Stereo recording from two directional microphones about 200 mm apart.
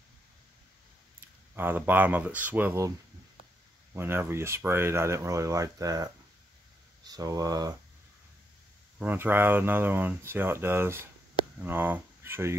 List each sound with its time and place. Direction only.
1.5 s speech: 10° right (ahead or behind)
3.9 s speech: 10° right (ahead or behind)
7.1 s speech: 15° right (ahead or behind)
8.9 s speech: 10° right (ahead or behind)